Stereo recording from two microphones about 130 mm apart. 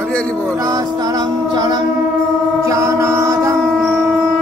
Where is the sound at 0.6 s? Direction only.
25° right (ahead or behind).